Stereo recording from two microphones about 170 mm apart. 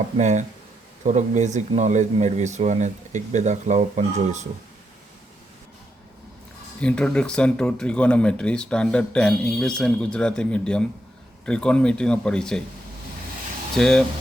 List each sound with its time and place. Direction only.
0.2 s speech: 45° right (ahead or behind)
6.7 s speech: 5° left (ahead or behind)
13.7 s speech: 5° left (ahead or behind)